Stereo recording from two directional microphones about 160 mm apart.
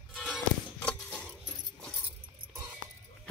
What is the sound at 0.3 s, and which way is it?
Music, 10° left (ahead or behind).